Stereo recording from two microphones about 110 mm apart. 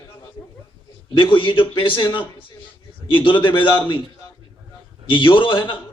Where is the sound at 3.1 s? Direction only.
50° left (ahead or behind).